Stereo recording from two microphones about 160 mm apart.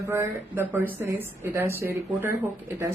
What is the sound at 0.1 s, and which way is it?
A man's voice, 10° right (ahead or behind).